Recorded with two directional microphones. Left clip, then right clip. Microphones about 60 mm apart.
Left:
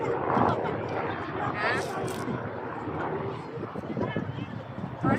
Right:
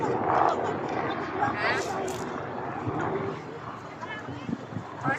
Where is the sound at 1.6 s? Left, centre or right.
Centre.